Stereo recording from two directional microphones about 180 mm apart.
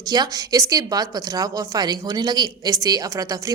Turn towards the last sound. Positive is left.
turn(degrees=-20)  # may be behind; listen again after turning